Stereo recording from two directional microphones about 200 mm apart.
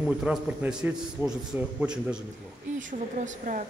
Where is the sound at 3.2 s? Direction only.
40° right (ahead or behind).